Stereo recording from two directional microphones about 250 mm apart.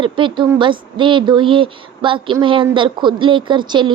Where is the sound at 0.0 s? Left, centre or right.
Centre.